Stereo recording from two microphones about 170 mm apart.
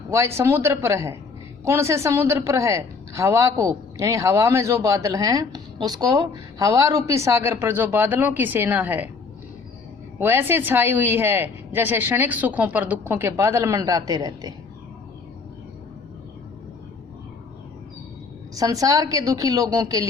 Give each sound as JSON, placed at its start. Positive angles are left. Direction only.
{"t": 0.1, "sound": "a woman's voice", "side_deg": -15}
{"t": 10.2, "sound": "a woman's voice", "side_deg": -10}
{"t": 18.5, "sound": "a woman's voice", "side_deg": -20}